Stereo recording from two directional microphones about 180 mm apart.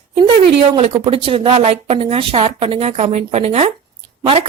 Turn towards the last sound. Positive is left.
turn(degrees=-30)  # may be behind; listen again after turning